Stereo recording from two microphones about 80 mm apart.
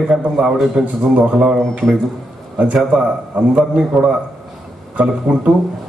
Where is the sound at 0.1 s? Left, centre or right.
Centre.